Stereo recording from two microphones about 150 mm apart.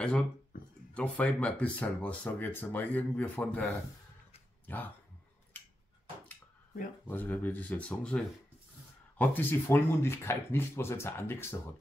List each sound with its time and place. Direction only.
0.9 s speech: 10° left (ahead or behind)
7.1 s speech: 15° left (ahead or behind)